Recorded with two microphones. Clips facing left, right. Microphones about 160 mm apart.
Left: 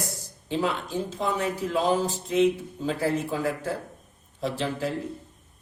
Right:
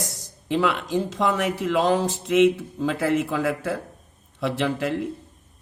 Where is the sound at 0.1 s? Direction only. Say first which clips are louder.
Right 5 dB; 90° right.